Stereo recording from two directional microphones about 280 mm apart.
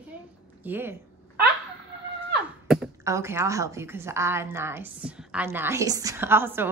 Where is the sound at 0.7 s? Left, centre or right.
Centre.